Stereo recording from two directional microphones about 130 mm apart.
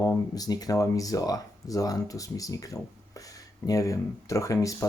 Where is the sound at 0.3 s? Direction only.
30° left (ahead or behind).